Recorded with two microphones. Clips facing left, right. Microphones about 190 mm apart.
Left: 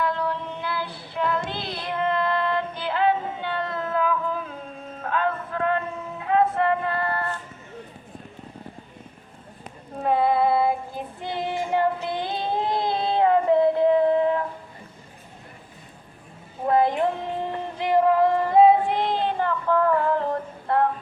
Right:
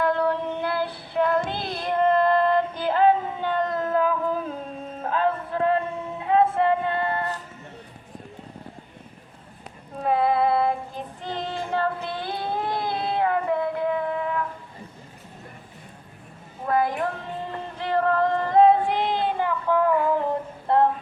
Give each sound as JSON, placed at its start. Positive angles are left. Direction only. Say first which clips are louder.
{"t": 0.0, "sound": "child singing", "louder": "right 4 dB", "side_deg": -55}
{"t": 5.0, "sound": "music", "louder": "right 1 dB", "side_deg": -35}
{"t": 10.0, "sound": "child singing", "louder": "left 1 dB", "side_deg": 0}
{"t": 16.6, "sound": "a sound", "louder": "left 3 dB", "side_deg": 25}
{"t": 20.7, "sound": "music", "louder": "right 2 dB", "side_deg": -25}